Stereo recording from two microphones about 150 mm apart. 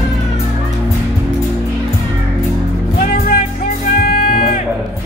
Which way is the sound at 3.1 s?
75° left (ahead or behind).